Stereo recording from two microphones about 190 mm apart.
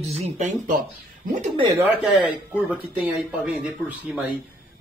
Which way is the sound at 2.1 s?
5° right (ahead or behind).